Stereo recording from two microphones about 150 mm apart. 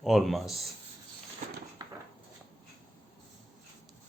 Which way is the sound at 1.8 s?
25° right (ahead or behind).